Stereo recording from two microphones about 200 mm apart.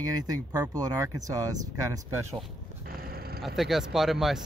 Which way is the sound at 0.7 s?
15° right (ahead or behind).